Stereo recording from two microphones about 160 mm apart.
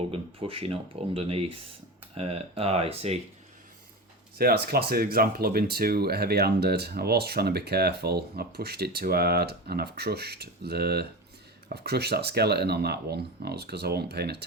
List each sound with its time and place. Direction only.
0.1 s speech: 35° right (ahead or behind)
4.4 s speech: 75° right (ahead or behind); by 14.4 s 90° right